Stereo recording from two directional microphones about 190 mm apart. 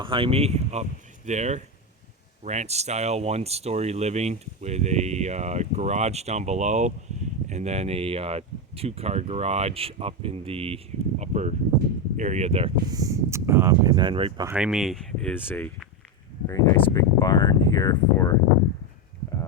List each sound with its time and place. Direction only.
0.0 s speech: 30° right (ahead or behind)
12.9 s speech: 20° right (ahead or behind)
14.4 s speech: 5° right (ahead or behind); by 18.3 s 20° left (ahead or behind)